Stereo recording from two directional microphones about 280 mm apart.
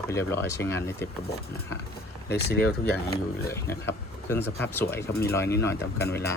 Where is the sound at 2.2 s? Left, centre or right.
Left.